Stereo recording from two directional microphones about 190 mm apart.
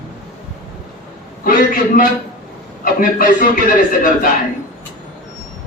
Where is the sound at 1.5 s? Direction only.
45° left (ahead or behind).